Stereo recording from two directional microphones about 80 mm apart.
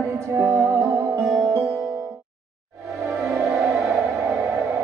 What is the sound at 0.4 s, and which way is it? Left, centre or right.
Music, right.